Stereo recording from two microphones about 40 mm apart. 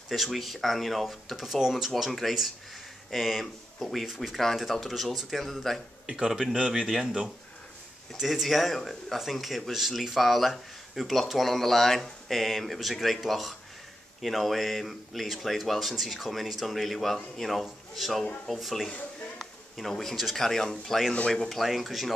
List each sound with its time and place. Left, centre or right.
0.1 s speech: centre
6.0 s speech: centre
8.2 s speech: centre